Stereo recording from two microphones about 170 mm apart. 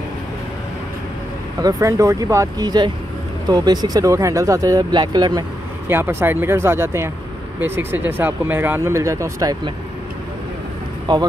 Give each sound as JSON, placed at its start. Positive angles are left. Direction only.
{"t": 1.6, "sound": "speech", "side_deg": -20}
{"t": 5.9, "sound": "speech", "side_deg": -15}